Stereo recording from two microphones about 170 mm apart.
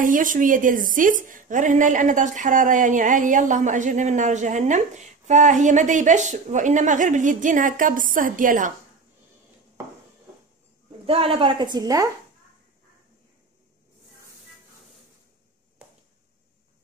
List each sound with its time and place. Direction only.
0.0 s a woman's voice: 50° right (ahead or behind)
11.1 s a woman's voice: 30° right (ahead or behind)
15.8 s a sound: 5° right (ahead or behind)